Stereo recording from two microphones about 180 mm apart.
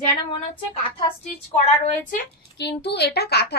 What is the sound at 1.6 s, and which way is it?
Speech, 40° left (ahead or behind).